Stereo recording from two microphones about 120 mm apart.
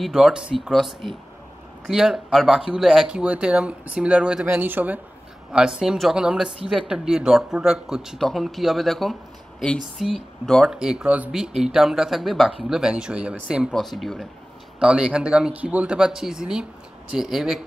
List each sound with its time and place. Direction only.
0.0 s speech: 5° right (ahead or behind)